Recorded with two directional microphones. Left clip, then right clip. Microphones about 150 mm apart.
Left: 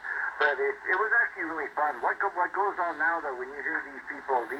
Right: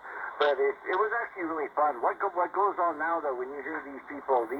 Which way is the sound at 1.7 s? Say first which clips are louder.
Right 1 dB; 25° right (ahead or behind).